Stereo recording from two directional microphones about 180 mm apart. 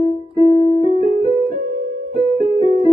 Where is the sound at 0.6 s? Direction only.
30° left (ahead or behind).